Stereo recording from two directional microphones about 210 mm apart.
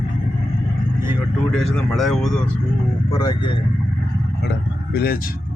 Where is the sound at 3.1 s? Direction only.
20° left (ahead or behind).